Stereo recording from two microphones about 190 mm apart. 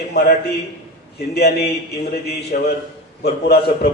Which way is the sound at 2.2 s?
55° left (ahead or behind).